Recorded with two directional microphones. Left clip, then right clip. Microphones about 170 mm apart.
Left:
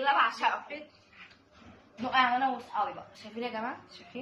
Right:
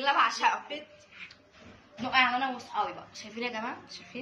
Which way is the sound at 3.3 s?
5° right (ahead or behind).